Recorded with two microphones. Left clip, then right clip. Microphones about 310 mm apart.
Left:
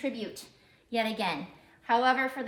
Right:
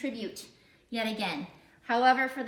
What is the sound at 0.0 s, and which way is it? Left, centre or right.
A woman's voice, centre.